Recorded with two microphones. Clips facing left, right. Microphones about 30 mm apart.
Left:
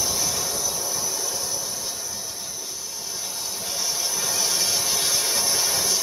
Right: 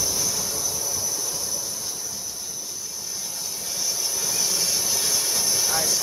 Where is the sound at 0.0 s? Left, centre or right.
Left.